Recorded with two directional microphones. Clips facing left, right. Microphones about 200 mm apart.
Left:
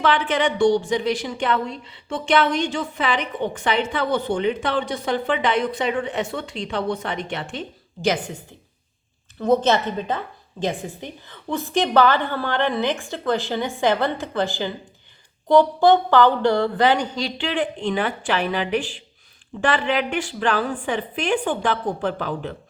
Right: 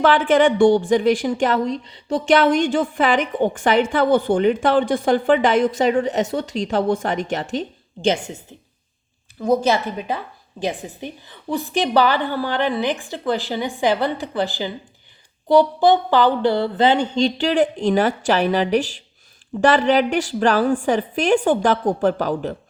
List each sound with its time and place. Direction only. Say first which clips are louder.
0.0 s a woman's voice: right 6 dB; 50° right (ahead or behind)
8.0 s a woman's voice: right 2 dB; 25° right (ahead or behind)
9.4 s a woman's voice: even; 10° right (ahead or behind); by 22.5 s 45° right (ahead or behind)